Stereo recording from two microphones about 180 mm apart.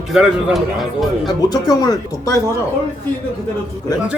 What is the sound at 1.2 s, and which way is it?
Speech, 20° left (ahead or behind).